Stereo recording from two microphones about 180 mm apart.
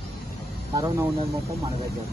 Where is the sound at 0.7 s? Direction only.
15° right (ahead or behind).